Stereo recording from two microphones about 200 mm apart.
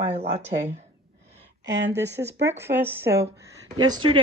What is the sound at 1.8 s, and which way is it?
Speech, 60° right (ahead or behind).